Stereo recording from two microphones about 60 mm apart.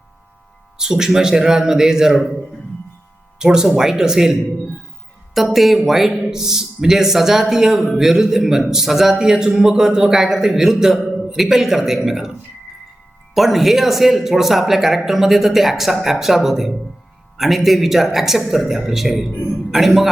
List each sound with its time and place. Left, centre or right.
0.8 s speech: centre
3.3 s speech: centre
5.5 s a man's voice: centre